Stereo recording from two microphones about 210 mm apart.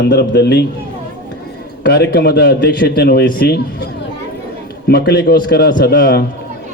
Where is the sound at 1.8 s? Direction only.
50° left (ahead or behind).